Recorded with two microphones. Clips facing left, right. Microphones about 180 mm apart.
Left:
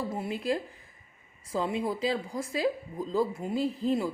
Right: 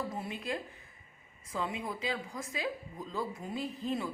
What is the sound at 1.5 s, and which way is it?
Speech, 35° left (ahead or behind).